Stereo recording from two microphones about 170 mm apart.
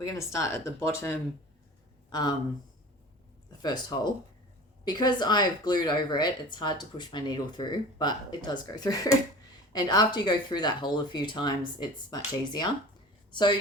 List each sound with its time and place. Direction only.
0.0 s speech: 20° left (ahead or behind)
3.6 s speech: 25° left (ahead or behind)